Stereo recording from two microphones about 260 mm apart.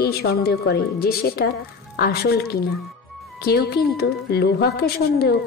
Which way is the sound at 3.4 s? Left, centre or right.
Left.